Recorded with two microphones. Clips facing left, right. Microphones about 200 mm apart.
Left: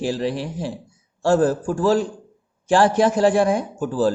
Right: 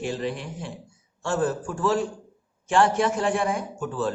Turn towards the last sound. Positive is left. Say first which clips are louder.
# left 7 dB
turn(degrees=35)  # may be behind; listen again after turning